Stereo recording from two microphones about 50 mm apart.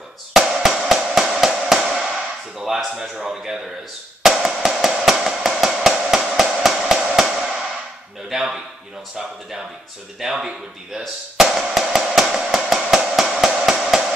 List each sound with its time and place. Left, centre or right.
0.3 s drum: centre
2.6 s speech: centre
4.2 s drum: centre
8.3 s speech: centre
10.2 s music: centre
12.6 s a sound: centre
13.5 s hammer: centre